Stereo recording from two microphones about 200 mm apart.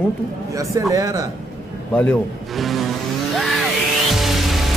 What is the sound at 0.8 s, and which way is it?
Speech, 15° right (ahead or behind).